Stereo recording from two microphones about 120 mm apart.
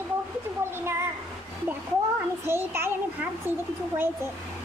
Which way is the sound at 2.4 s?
20° right (ahead or behind).